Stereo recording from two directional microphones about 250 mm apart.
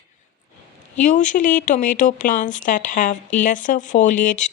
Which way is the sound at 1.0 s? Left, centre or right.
Left.